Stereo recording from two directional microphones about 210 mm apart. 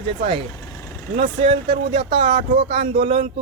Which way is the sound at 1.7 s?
30° right (ahead or behind).